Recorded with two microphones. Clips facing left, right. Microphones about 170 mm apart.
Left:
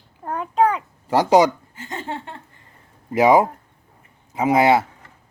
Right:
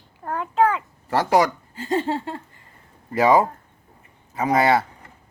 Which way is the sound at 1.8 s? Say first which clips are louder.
Right 9 dB; 30° right (ahead or behind).